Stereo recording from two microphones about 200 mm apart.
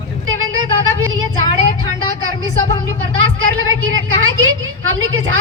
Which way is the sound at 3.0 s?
90° right.